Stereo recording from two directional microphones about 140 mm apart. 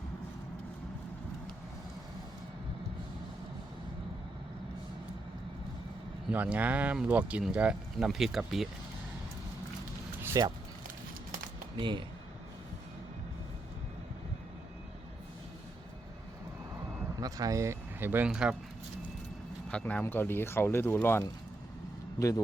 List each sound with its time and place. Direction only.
6.3 s speech: 10° right (ahead or behind)
10.2 s speech: 25° right (ahead or behind)
10.8 s a sound: 80° right
11.8 s speech: 35° right (ahead or behind)
17.2 s speech: 25° right (ahead or behind); by 18.5 s 5° right (ahead or behind)
19.7 s speech: 10° left (ahead or behind)